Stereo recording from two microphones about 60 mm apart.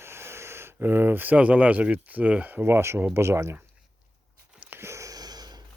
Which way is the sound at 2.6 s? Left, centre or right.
Right.